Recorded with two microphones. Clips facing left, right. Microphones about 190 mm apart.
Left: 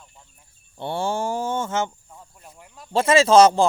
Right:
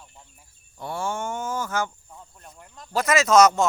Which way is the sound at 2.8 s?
30° left (ahead or behind).